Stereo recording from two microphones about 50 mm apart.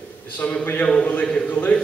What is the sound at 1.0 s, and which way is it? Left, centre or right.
Speech, left.